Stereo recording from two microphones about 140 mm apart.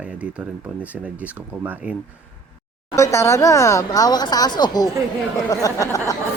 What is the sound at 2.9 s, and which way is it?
Speech, 20° left (ahead or behind).